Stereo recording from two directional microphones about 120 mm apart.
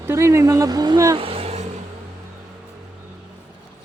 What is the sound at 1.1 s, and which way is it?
Vehicle, 50° right (ahead or behind).